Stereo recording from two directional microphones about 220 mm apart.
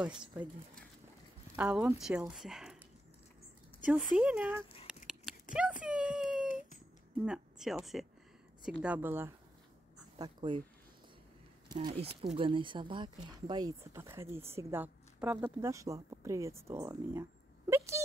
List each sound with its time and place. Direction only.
0.0 s speech: 5° right (ahead or behind)
1.6 s speech: 5° right (ahead or behind)
3.8 s speech: 5° right (ahead or behind)
4.8 s a sound: centre (ahead or behind)
7.2 s a woman's voice: centre (ahead or behind)
10.1 s speech: 20° right (ahead or behind)
11.7 s a woman's voice: 25° right (ahead or behind)